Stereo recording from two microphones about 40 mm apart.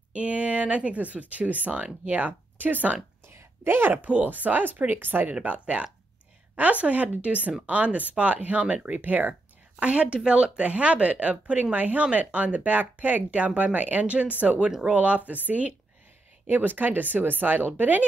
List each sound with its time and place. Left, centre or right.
0.1 s speech: right
2.5 s speech: right
3.3 s a sound: right
4.0 s speech: right
5.3 s speech: right
9.0 s speech: right
9.8 s speech: right
16.4 s speech: right